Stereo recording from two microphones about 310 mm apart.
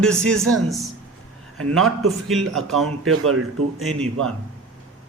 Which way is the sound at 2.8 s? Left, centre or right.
Right.